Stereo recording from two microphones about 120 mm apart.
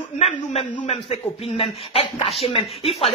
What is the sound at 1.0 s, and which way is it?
A man's voice, 55° left (ahead or behind).